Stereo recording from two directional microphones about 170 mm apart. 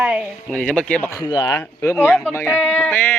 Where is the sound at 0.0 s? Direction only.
5° right (ahead or behind); by 1.2 s 10° left (ahead or behind).